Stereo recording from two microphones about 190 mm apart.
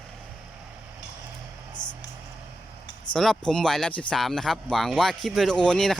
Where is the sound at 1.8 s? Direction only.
20° left (ahead or behind).